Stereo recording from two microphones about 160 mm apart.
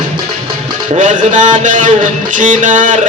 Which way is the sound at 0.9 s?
50° right (ahead or behind).